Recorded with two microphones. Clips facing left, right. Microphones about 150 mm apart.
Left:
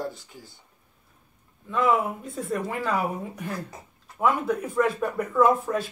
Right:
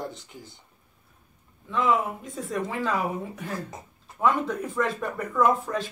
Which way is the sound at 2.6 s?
15° left (ahead or behind).